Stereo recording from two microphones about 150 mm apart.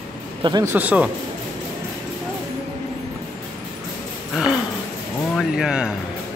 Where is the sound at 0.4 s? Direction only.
30° right (ahead or behind).